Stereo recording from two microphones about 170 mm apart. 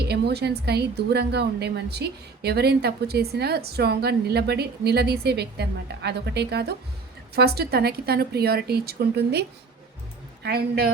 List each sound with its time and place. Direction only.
0.0 s speech: 70° right (ahead or behind)